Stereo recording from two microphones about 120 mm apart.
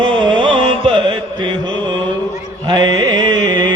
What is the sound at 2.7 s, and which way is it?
Music, 40° right (ahead or behind).